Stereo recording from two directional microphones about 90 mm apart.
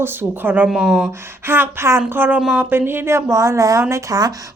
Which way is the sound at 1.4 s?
25° right (ahead or behind).